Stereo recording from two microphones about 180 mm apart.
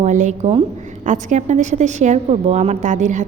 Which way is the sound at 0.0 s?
40° right (ahead or behind).